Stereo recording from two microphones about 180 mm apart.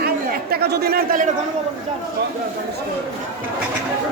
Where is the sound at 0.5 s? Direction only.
60° right (ahead or behind).